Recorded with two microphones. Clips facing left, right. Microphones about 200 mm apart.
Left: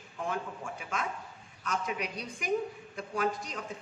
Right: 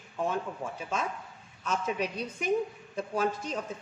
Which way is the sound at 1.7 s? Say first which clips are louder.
Right 3 dB; 30° right (ahead or behind).